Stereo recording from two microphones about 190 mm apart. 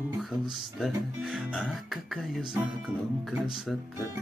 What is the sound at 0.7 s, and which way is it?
Speech, centre (ahead or behind).